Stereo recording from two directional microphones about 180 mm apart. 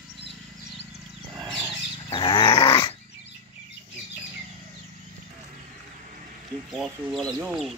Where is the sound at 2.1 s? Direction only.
25° left (ahead or behind).